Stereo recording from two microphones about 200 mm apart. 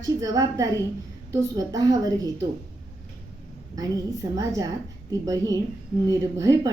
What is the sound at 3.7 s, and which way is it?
Speech, 15° right (ahead or behind).